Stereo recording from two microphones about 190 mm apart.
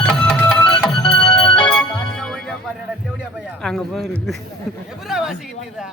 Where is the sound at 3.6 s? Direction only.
5° left (ahead or behind).